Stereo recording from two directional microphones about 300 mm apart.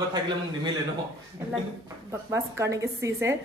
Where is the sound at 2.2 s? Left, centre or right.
Centre.